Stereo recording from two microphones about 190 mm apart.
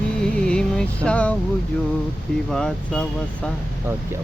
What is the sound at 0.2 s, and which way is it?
Music, 5° left (ahead or behind).